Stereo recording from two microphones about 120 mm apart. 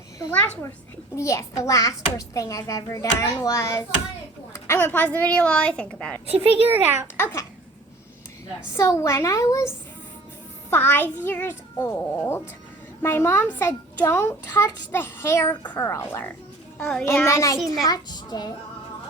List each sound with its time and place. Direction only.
0.3 s a child's voice: 15° left (ahead or behind)
1.1 s a child's voice: 25° left (ahead or behind); by 6.1 s 10° left (ahead or behind)
6.7 s a child's voice: 15° right (ahead or behind)
7.2 s a child's voice: 20° left (ahead or behind)
8.7 s a child's voice: 25° left (ahead or behind)